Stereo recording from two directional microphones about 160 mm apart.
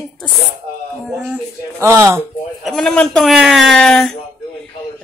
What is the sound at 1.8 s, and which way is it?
Speech, 20° right (ahead or behind).